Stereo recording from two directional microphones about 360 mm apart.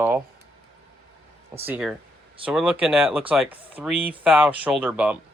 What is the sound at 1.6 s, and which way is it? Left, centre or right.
Speech, centre.